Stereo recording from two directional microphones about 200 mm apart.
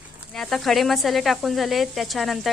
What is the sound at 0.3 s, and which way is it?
Speech, centre (ahead or behind).